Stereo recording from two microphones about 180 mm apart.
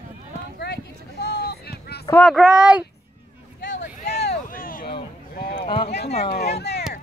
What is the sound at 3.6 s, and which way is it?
Hubbub, 70° left (ahead or behind).